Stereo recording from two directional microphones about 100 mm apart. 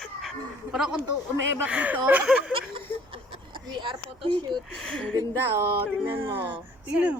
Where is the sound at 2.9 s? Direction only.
20° left (ahead or behind).